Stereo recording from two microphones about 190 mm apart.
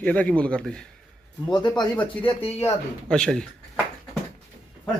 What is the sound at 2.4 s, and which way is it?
Speech, 30° left (ahead or behind).